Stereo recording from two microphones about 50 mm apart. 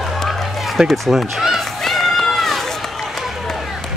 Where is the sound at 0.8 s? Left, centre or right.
Centre.